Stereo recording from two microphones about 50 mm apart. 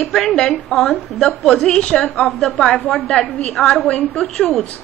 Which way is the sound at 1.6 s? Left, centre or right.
Centre.